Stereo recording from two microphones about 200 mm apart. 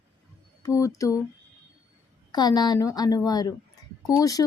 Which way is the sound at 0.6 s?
15° left (ahead or behind).